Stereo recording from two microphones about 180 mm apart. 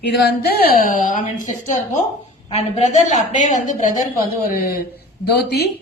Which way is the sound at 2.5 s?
40° left (ahead or behind).